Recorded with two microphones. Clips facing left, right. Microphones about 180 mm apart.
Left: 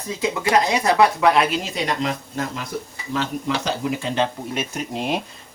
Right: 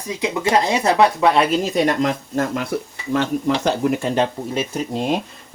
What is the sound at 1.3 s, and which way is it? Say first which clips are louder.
Speech: right 4 dB; 40° right (ahead or behind).